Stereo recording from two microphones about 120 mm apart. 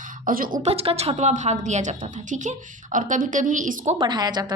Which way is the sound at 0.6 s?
55° right (ahead or behind).